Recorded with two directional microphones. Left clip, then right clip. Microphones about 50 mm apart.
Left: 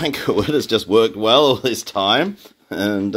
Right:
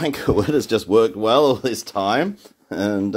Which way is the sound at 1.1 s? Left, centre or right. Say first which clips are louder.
Left 2 dB; right.